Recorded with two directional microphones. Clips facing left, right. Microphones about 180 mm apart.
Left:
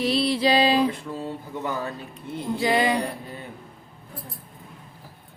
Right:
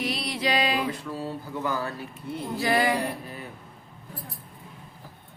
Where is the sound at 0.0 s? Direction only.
30° left (ahead or behind).